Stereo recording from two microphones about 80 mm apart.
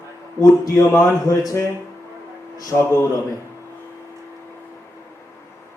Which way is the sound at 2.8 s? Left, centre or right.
Left.